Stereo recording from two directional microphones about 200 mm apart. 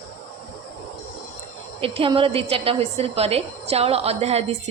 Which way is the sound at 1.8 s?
25° right (ahead or behind).